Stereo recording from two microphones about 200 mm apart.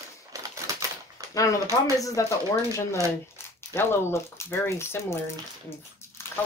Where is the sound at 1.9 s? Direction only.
15° left (ahead or behind).